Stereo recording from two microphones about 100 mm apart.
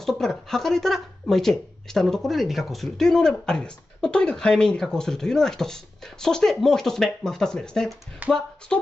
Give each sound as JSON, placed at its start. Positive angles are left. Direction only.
{"t": 0.0, "sound": "a woman's voice", "side_deg": 5}
{"t": 8.2, "sound": "speech", "side_deg": -15}